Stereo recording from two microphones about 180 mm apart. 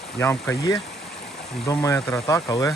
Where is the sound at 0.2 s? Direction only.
15° left (ahead or behind).